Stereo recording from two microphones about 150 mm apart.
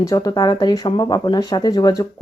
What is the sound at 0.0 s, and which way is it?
Speech, 20° left (ahead or behind).